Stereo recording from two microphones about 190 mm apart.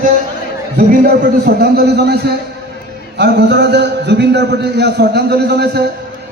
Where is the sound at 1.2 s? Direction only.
55° right (ahead or behind).